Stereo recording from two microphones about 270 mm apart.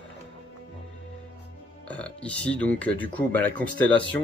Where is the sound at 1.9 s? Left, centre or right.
Centre.